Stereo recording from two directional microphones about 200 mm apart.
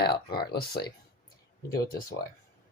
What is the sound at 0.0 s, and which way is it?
Speech, 50° left (ahead or behind).